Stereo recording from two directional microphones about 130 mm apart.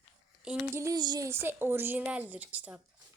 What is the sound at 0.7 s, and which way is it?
Speech, 20° right (ahead or behind).